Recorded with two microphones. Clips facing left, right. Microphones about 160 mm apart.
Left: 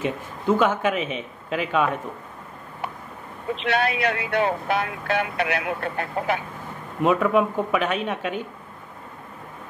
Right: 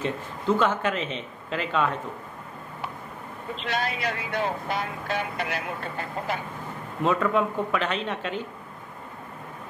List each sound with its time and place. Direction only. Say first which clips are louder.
0.0 s speech: left 2 dB; 15° left (ahead or behind)
3.5 s speech: left 6 dB; 65° left (ahead or behind)
7.0 s speech: left 4 dB; 15° left (ahead or behind)